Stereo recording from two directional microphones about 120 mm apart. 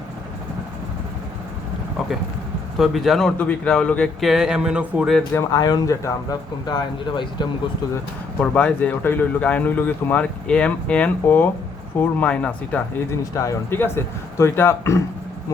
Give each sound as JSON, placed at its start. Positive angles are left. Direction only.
{"t": 2.7, "sound": "speech", "side_deg": 0}
{"t": 3.3, "sound": "speech", "side_deg": 10}
{"t": 4.2, "sound": "speech", "side_deg": -5}
{"t": 5.3, "sound": "speech", "side_deg": 30}
{"t": 6.7, "sound": "speech", "side_deg": 40}
{"t": 8.4, "sound": "speech", "side_deg": 10}
{"t": 13.1, "sound": "speech", "side_deg": 25}